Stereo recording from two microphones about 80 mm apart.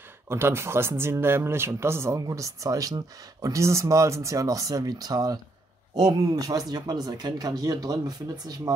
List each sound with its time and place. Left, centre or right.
0.3 s speech: right